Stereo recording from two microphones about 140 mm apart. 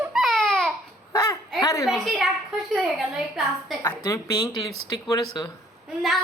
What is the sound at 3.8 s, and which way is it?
A woman's voice, 25° left (ahead or behind).